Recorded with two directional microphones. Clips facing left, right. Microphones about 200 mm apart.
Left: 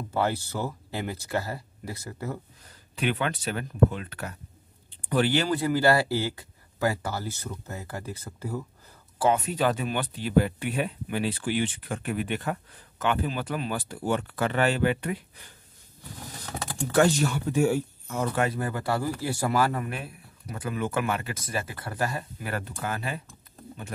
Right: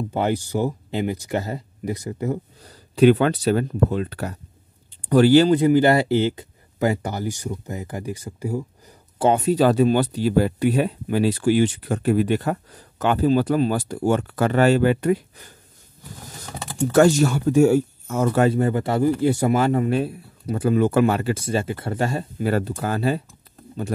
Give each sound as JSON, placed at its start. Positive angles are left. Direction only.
{"t": 0.1, "sound": "speech", "side_deg": -15}
{"t": 2.3, "sound": "speech", "side_deg": -35}
{"t": 5.5, "sound": "a man's voice", "side_deg": -20}
{"t": 9.3, "sound": "speech", "side_deg": -35}
{"t": 16.9, "sound": "speech", "side_deg": -45}
{"t": 18.5, "sound": "a man's voice", "side_deg": -25}